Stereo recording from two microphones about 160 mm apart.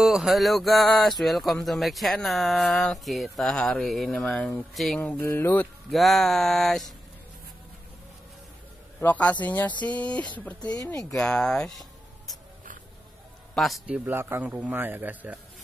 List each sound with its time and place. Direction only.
0.0 s speech: centre (ahead or behind)
5.2 s speech: 15° left (ahead or behind)
5.9 s speech: centre (ahead or behind)
9.0 s speech: 10° left (ahead or behind)
10.6 s speech: 25° left (ahead or behind)
11.1 s speech: 5° left (ahead or behind)
13.6 s a man's voice: centre (ahead or behind)